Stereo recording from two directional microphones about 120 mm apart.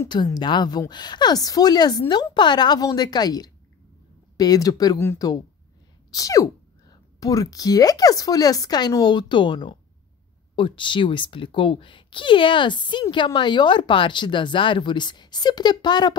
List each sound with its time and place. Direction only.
0.1 s speech: 35° left (ahead or behind)